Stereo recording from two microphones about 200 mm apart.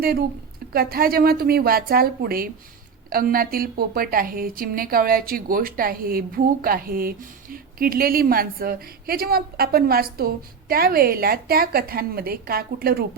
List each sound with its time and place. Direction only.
0.0 s a woman's voice: 50° right (ahead or behind)